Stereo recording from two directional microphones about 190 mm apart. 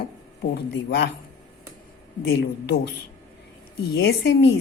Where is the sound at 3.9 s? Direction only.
65° left (ahead or behind).